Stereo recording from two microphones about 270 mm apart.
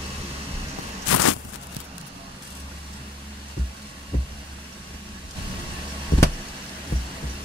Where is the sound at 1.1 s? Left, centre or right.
Left.